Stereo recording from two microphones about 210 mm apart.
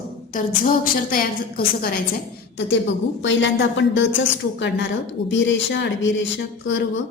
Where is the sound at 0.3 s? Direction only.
40° left (ahead or behind).